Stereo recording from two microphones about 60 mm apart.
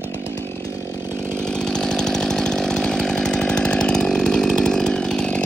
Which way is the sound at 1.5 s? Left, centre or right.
Centre.